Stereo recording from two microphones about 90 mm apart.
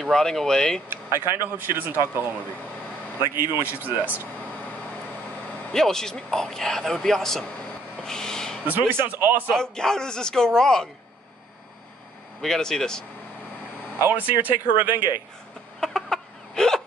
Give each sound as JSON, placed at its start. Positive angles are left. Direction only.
{"t": 0.0, "sound": "speech", "side_deg": 5}
{"t": 0.8, "sound": "speech", "side_deg": -30}
{"t": 3.5, "sound": "speech", "side_deg": -20}
{"t": 5.7, "sound": "speech", "side_deg": 5}
{"t": 8.0, "sound": "a sound", "side_deg": 5}
{"t": 8.6, "sound": "speech", "side_deg": -25}
{"t": 9.5, "sound": "speech", "side_deg": 5}
{"t": 12.4, "sound": "speech", "side_deg": 5}
{"t": 13.9, "sound": "speech", "side_deg": -20}
{"t": 15.8, "sound": "chicken", "side_deg": 5}